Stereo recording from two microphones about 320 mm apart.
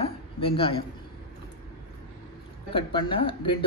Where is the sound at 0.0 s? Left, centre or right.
Centre.